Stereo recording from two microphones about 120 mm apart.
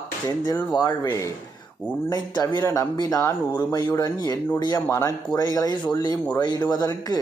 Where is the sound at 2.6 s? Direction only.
25° left (ahead or behind).